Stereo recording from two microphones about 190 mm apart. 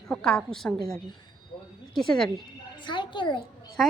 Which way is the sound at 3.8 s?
Centre (ahead or behind).